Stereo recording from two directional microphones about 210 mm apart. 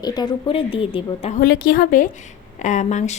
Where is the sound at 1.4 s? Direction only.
50° left (ahead or behind).